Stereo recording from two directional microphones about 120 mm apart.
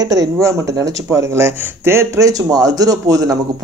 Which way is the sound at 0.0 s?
30° right (ahead or behind).